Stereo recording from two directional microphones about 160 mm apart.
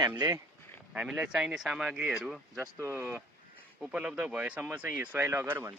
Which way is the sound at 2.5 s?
20° right (ahead or behind).